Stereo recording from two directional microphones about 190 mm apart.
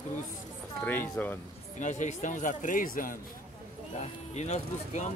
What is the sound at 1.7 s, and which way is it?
Speech, 40° left (ahead or behind).